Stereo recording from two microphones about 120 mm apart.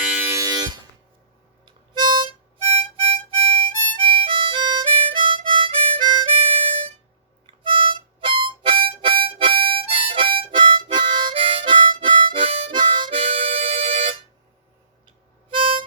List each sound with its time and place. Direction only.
0.0 s a sound: 10° right (ahead or behind)
0.3 s music: 30° right (ahead or behind)
1.6 s harmonica: 40° right (ahead or behind)
2.7 s harmonica: 50° right (ahead or behind)
7.4 s harmonica: 45° right (ahead or behind)
15.5 s harmonica: 45° right (ahead or behind)